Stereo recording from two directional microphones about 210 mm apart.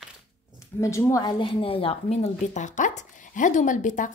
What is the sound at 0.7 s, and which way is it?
A woman's voice, 15° left (ahead or behind).